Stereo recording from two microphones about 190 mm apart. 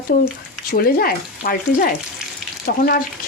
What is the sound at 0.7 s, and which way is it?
Speech, 50° left (ahead or behind).